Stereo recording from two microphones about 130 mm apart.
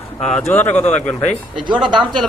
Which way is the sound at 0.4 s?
15° left (ahead or behind).